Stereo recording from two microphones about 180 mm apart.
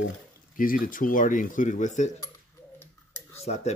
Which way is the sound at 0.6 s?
50° left (ahead or behind).